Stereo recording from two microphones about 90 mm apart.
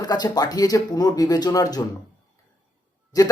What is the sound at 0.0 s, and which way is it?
Speech, 45° left (ahead or behind).